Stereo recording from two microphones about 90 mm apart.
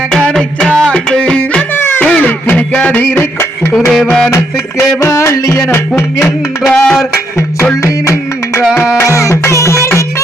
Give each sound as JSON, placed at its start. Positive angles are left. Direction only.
{"t": 0.1, "sound": "music", "side_deg": 5}
{"t": 3.8, "sound": "music", "side_deg": 5}
{"t": 4.3, "sound": "music", "side_deg": 35}
{"t": 6.7, "sound": "music", "side_deg": 10}
{"t": 7.3, "sound": "music", "side_deg": 30}